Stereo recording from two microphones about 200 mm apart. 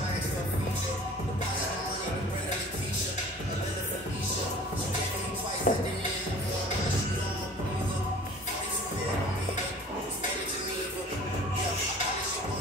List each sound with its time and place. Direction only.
5.7 s speech: 40° left (ahead or behind)